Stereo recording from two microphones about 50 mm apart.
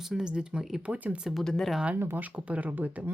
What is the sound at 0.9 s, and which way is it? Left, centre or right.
Speech, right.